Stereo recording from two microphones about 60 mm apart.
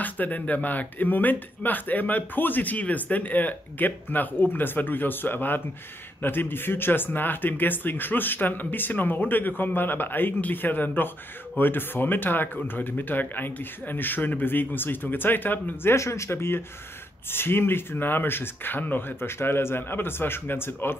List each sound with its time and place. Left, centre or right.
0.0 s speech: left
15.9 s speech: left